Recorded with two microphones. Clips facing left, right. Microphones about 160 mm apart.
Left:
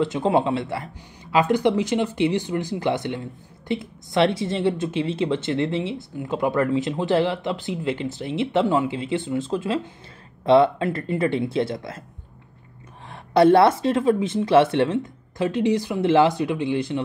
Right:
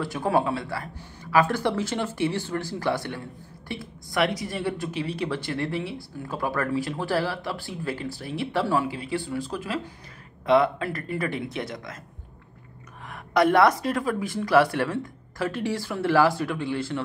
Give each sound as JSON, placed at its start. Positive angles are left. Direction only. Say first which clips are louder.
{"t": 0.0, "sound": "speech", "louder": "left 4 dB", "side_deg": 20}
{"t": 13.1, "sound": "speech", "louder": "left 5 dB", "side_deg": 30}